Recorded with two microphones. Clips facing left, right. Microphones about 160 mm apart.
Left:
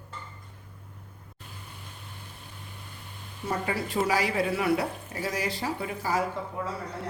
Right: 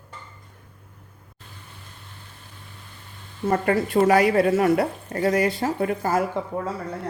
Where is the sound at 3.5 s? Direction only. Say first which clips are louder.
Right 8 dB; 55° right (ahead or behind).